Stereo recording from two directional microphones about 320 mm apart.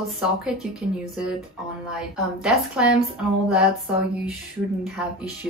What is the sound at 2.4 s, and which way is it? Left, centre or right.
Speech, centre.